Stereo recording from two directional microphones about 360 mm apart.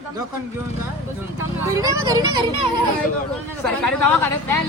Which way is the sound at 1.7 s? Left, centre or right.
Centre.